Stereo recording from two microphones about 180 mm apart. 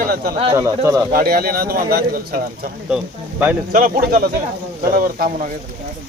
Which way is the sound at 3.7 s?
50° right (ahead or behind).